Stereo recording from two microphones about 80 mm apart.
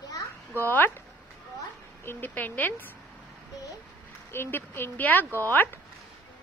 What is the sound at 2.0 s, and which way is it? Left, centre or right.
Speech, left.